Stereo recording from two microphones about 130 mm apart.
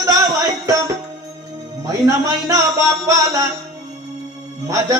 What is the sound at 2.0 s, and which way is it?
Speech, 25° right (ahead or behind).